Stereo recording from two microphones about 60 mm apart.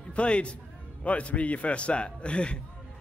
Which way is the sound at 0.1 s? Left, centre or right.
Centre.